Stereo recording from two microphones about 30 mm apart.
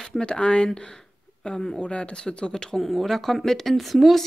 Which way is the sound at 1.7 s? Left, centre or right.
Left.